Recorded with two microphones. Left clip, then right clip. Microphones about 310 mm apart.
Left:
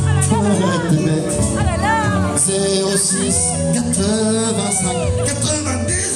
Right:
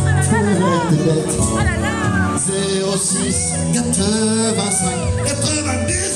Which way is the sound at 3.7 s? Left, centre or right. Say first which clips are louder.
Right 3 dB; centre.